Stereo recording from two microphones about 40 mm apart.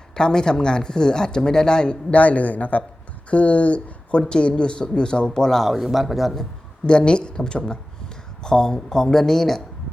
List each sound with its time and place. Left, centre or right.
0.1 s speech: centre
5.6 s speech: centre
6.8 s speech: left